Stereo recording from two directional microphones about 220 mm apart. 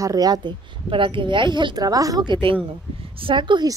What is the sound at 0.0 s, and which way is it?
A woman's voice, 15° right (ahead or behind).